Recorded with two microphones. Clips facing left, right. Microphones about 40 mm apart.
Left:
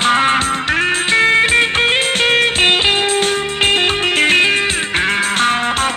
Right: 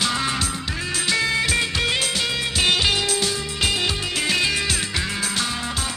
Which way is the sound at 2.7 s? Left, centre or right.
Left.